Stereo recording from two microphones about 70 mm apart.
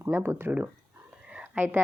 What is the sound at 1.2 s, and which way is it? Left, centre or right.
Whispering, centre.